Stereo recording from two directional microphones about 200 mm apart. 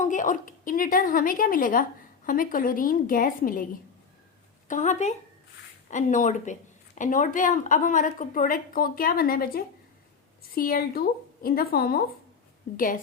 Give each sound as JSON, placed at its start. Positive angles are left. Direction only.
{"t": 0.0, "sound": "speech", "side_deg": 40}
{"t": 4.7, "sound": "a woman's voice", "side_deg": 40}